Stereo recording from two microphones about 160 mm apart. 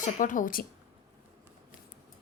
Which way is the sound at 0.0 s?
55° left (ahead or behind).